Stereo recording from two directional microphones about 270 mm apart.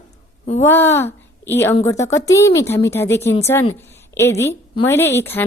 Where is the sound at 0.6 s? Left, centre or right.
Centre.